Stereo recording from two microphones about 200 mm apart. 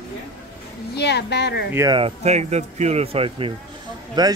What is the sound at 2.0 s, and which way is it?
Speech, 30° right (ahead or behind).